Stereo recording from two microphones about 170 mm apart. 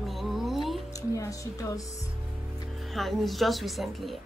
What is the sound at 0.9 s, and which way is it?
Speech, 20° left (ahead or behind).